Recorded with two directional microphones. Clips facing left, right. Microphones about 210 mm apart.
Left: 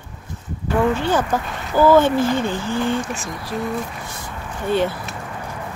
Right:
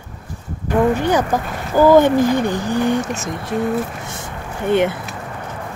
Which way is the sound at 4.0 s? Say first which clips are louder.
Right 3 dB; 25° right (ahead or behind).